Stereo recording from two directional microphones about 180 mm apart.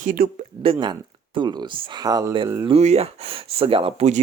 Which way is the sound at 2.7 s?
35° right (ahead or behind).